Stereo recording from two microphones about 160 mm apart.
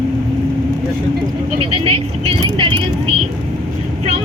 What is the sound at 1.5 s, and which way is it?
Speech, 35° right (ahead or behind).